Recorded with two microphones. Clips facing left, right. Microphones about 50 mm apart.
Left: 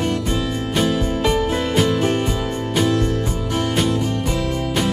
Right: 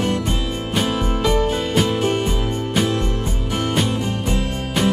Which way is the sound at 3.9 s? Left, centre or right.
Right.